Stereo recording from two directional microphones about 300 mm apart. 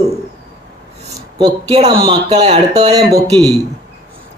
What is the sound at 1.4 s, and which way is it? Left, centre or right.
Speech, centre.